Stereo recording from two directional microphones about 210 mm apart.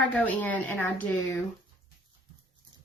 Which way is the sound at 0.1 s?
10° left (ahead or behind).